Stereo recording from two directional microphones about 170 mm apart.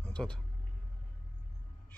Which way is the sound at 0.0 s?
5° left (ahead or behind).